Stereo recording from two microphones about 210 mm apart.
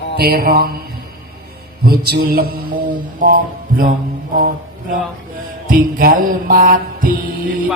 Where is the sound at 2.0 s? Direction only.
45° right (ahead or behind).